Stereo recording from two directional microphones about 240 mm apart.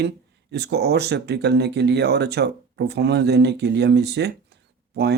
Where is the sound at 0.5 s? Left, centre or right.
Right.